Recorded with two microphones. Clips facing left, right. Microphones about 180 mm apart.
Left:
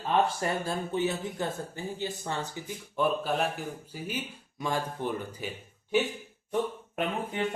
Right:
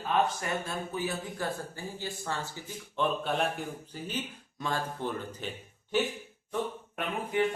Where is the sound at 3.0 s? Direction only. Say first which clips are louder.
Left 2 dB; 5° left (ahead or behind).